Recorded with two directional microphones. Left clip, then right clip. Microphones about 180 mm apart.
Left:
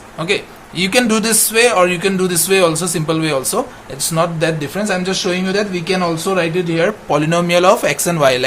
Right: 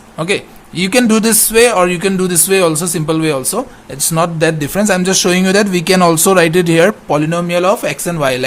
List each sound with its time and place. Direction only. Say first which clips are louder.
0.2 s speech: right 2 dB; 40° right (ahead or behind)
7.1 s speech: even; 20° right (ahead or behind)